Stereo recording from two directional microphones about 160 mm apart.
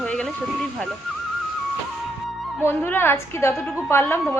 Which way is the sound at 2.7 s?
15° left (ahead or behind).